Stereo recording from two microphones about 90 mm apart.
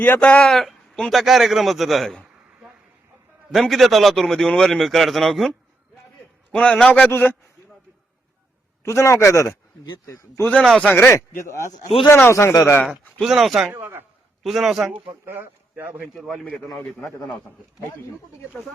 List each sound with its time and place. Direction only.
0.0 s speech: 20° left (ahead or behind)
0.6 s a sound: 5° left (ahead or behind)
1.2 s a man's voice: centre (ahead or behind)
3.5 s a man's voice: centre (ahead or behind)
6.9 s speech: 20° left (ahead or behind)
8.8 s a man's voice: 30° left (ahead or behind)
10.6 s a man's voice: 5° left (ahead or behind)
10.8 s speech: 25° left (ahead or behind)
12.0 s speech: 20° left (ahead or behind)
13.2 s a man's voice: centre (ahead or behind)
13.7 s a man's voice: 25° right (ahead or behind)
14.4 s a man's voice: centre (ahead or behind)
15.0 s speech: 25° right (ahead or behind)
16.1 s a man's voice: 5° right (ahead or behind)